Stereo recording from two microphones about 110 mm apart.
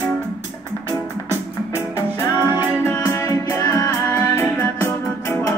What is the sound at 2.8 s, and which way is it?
Music, 30° left (ahead or behind).